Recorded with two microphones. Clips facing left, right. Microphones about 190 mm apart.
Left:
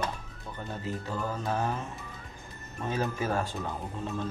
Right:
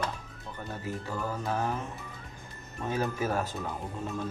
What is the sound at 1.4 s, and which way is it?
Speech, 15° left (ahead or behind).